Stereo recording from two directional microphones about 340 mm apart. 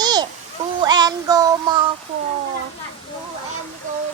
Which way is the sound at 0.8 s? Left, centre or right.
Centre.